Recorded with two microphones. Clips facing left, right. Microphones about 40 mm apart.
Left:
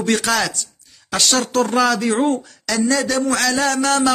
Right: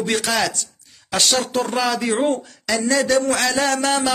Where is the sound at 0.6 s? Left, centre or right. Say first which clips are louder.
Left 1 dB; right.